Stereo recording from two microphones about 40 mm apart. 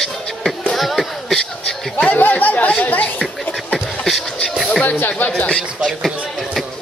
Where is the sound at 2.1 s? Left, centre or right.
Left.